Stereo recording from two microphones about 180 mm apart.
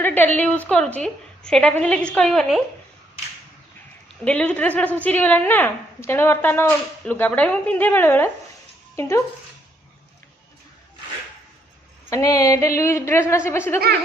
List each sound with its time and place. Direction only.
0.0 s a sound: 10° left (ahead or behind)
0.3 s a woman's voice: 10° left (ahead or behind)
4.2 s a woman's voice: 5° left (ahead or behind)
12.1 s a woman's voice: 20° left (ahead or behind)